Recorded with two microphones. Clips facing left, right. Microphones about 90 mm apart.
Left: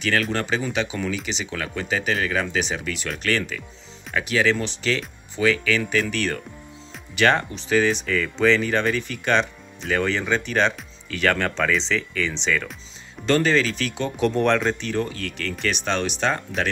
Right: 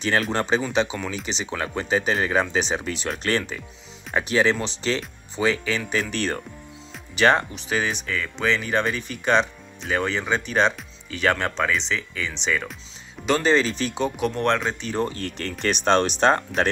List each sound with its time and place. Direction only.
0.0 s speech: 30° right (ahead or behind)
14.3 s speech: centre (ahead or behind)
15.0 s speech: 35° right (ahead or behind)